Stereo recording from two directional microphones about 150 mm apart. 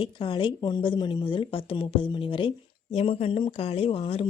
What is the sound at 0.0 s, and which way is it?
A woman's voice, 35° left (ahead or behind).